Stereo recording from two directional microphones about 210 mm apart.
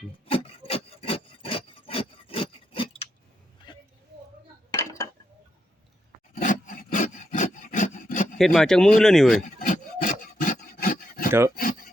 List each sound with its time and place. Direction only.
0.3 s rub: 25° left (ahead or behind)
3.7 s a sound: 20° left (ahead or behind)
4.7 s dishes: 15° left (ahead or behind)
6.3 s roar: 40° left (ahead or behind)
8.4 s speech: centre (ahead or behind)
9.6 s rub: 40° left (ahead or behind)
11.3 s speech: 10° right (ahead or behind)
11.5 s a sound: 40° left (ahead or behind)